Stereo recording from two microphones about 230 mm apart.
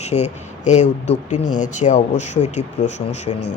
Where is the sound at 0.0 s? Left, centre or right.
Left.